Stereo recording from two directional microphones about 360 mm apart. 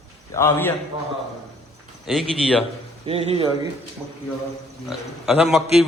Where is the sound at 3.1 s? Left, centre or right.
Centre.